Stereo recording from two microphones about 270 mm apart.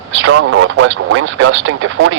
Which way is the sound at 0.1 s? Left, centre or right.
Right.